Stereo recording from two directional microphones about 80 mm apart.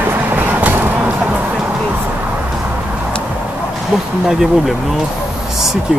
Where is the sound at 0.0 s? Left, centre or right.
Right.